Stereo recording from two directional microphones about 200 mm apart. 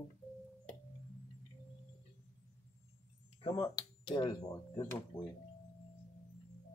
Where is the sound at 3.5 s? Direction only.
20° left (ahead or behind).